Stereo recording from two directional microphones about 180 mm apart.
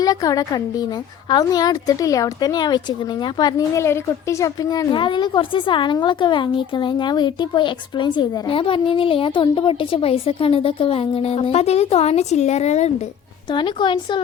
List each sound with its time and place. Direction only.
0.0 s a woman's voice: 20° left (ahead or behind); by 12.9 s 40° left (ahead or behind)
13.5 s a woman's voice: 25° left (ahead or behind)